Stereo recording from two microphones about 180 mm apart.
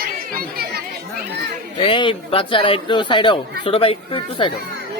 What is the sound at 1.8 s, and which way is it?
Speech, 30° left (ahead or behind).